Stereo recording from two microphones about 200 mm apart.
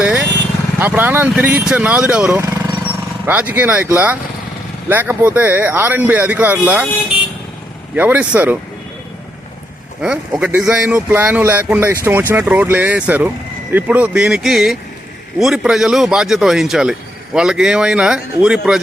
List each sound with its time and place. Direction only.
0.0 s vehicle: 10° right (ahead or behind)
0.8 s speech: 10° right (ahead or behind)
7.9 s speech: 10° right (ahead or behind)
10.0 s a man's voice: 5° right (ahead or behind)